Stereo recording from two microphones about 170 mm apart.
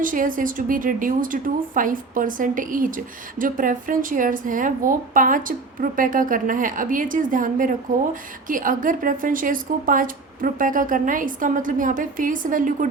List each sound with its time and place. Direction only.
0.0 s a woman's voice: 50° right (ahead or behind)